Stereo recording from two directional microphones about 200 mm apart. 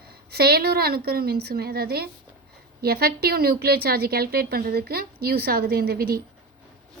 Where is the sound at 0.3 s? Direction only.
50° right (ahead or behind).